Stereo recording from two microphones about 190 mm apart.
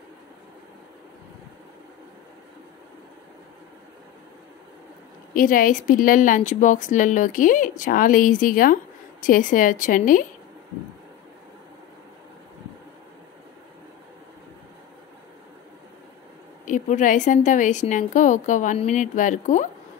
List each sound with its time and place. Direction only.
5.3 s speech: 45° left (ahead or behind)
16.6 s a woman's voice: 40° left (ahead or behind)